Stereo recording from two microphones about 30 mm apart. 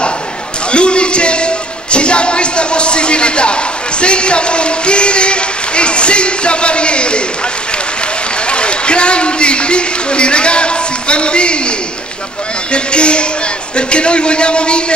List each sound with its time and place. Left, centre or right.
0.7 s speech: left
8.5 s a man's voice: left
12.7 s a man's voice: left